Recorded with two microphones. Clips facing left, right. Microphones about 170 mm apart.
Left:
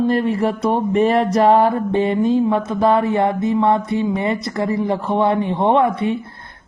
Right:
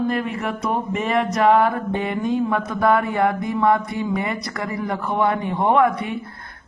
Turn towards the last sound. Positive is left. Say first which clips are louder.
# left 2 dB
turn(degrees=25)  # may be behind; listen again after turning